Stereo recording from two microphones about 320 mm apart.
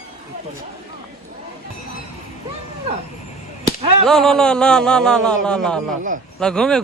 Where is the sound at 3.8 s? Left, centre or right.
Centre.